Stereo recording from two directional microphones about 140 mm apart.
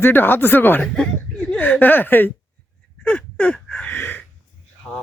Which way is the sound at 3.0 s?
10° left (ahead or behind).